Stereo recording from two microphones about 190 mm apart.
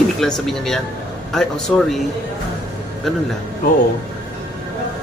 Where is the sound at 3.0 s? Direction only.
Centre (ahead or behind).